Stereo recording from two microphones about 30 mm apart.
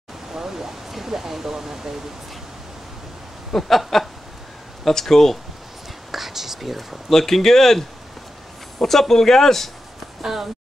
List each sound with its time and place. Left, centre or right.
0.3 s speech: centre
3.6 s a sound: centre
4.8 s speech: centre
6.1 s speech: centre
7.1 s speech: centre
10.2 s speech: centre